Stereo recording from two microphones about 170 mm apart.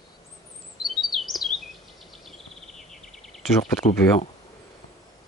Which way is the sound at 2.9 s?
Centre (ahead or behind).